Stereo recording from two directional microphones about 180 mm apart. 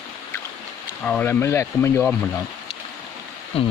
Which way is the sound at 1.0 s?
10° left (ahead or behind).